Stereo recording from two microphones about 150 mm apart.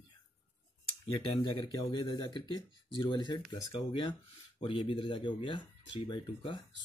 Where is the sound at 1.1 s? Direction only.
30° left (ahead or behind).